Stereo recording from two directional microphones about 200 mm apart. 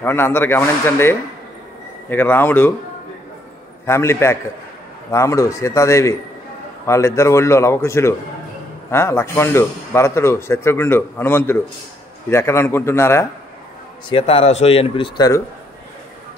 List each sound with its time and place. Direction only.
0.0 s speech: 10° left (ahead or behind)
3.8 s speech: 15° left (ahead or behind)
14.0 s speech: 25° left (ahead or behind)